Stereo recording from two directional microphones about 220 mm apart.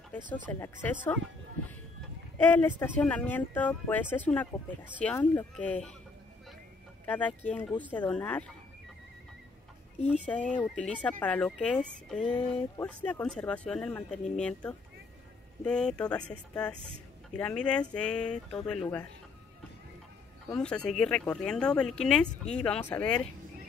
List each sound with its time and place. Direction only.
0.3 s speech: 5° left (ahead or behind)
2.3 s speech: 10° left (ahead or behind)
7.1 s speech: 5° left (ahead or behind)
10.0 s speech: 5° left (ahead or behind)
12.3 s speech: 25° left (ahead or behind)
12.7 s speech: 5° left (ahead or behind)
17.4 s speech: 5° left (ahead or behind)
20.5 s speech: 5° left (ahead or behind)